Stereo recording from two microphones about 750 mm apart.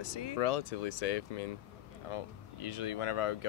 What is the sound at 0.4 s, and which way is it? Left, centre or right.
Speech, left.